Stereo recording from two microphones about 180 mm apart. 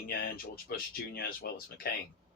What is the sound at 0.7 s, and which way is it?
Speech, 55° left (ahead or behind).